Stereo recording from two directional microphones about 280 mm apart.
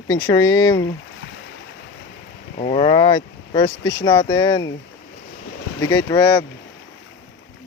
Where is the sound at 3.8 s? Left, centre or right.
Left.